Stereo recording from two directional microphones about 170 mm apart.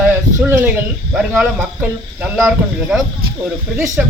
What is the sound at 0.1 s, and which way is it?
Speech, 10° right (ahead or behind).